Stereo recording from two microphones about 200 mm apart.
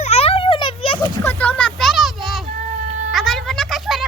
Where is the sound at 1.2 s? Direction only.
10° left (ahead or behind).